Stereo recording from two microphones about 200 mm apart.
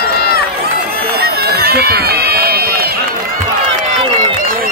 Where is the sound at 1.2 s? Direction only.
55° right (ahead or behind).